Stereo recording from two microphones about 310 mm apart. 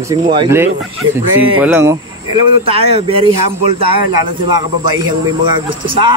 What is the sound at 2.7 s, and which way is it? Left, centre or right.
Speech, centre.